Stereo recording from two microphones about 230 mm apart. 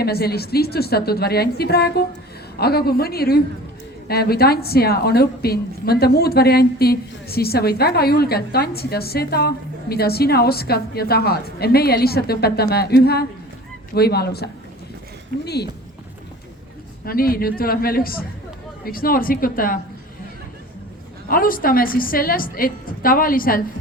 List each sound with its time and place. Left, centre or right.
0.0 s a woman's voice: left
15.4 s a woman's voice: left
17.1 s a woman's voice: left
21.2 s a woman's voice: left